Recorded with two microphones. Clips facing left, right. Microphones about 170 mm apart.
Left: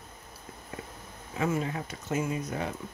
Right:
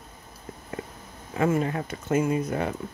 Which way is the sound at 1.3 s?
55° right (ahead or behind).